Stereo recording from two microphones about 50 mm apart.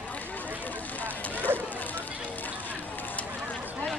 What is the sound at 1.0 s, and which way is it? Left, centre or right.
Vehicle, left.